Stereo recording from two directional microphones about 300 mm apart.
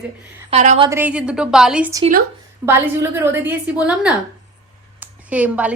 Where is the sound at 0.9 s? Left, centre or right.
Centre.